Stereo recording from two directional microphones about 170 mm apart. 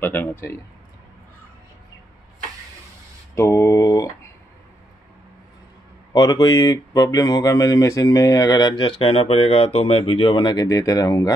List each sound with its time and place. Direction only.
0.0 s speech: 10° left (ahead or behind)
3.3 s a sound: 15° left (ahead or behind)
6.1 s speech: 20° left (ahead or behind)